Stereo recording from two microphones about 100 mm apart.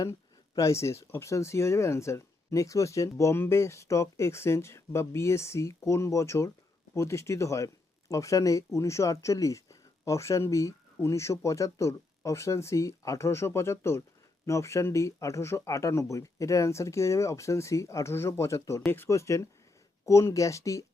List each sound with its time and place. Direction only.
0.0 s speech: 35° left (ahead or behind)